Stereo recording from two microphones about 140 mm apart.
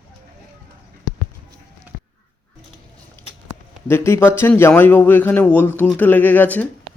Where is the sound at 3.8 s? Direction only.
15° left (ahead or behind).